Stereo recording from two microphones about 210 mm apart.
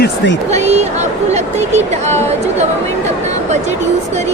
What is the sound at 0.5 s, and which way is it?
Speech, 30° right (ahead or behind).